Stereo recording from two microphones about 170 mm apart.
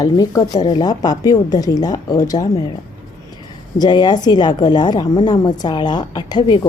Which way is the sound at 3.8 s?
25° left (ahead or behind).